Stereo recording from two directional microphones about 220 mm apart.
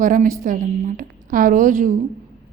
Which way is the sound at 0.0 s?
40° right (ahead or behind).